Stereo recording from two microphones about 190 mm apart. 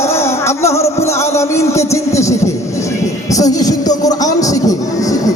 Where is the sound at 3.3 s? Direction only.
20° left (ahead or behind).